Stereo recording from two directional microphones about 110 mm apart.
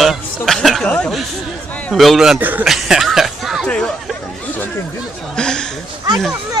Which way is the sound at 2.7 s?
5° right (ahead or behind).